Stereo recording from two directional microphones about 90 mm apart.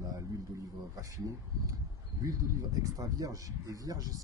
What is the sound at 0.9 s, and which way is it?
Speech, 40° right (ahead or behind).